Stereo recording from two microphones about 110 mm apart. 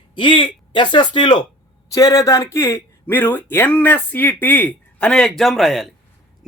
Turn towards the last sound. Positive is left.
turn(degrees=0)  # may be behind; listen again after turning